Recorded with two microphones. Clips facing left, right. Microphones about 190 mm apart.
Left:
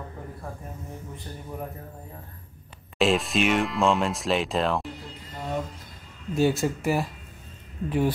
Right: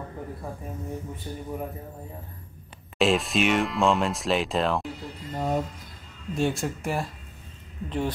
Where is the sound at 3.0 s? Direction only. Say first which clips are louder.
Even; centre (ahead or behind).